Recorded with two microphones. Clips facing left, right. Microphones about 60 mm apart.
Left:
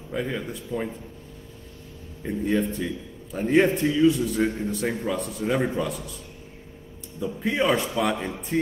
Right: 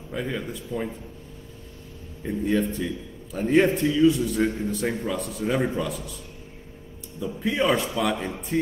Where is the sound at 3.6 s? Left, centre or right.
Left.